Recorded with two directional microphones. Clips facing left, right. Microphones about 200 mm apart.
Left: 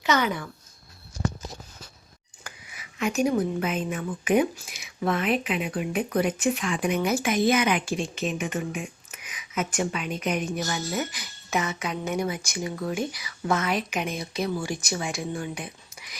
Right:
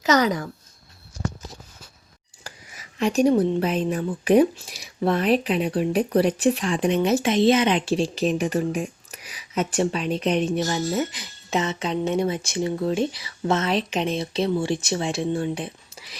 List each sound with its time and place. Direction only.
0.0 s speech: 40° right (ahead or behind)
2.4 s speech: 35° right (ahead or behind)